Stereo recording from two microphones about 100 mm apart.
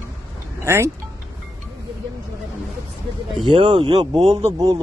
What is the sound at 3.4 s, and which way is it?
Speech, 55° right (ahead or behind).